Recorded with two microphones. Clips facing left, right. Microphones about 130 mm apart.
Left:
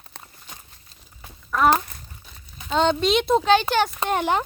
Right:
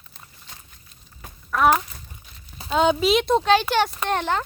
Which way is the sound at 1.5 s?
Centre (ahead or behind).